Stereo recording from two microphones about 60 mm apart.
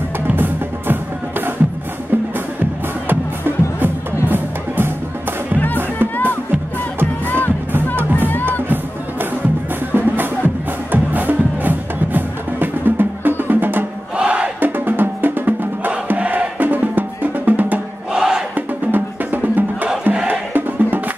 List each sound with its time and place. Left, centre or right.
3.1 s music: right
5.9 s music: left
7.7 s music: right
8.2 s music: left
9.9 s music: right
14.1 s music: centre
14.6 s music: right
18.1 s battle cry: centre
18.9 s music: right